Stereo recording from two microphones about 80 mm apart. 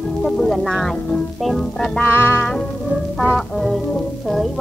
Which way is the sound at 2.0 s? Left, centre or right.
Left.